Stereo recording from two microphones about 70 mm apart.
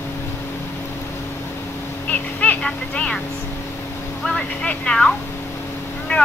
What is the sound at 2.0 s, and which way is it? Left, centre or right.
Speech, centre.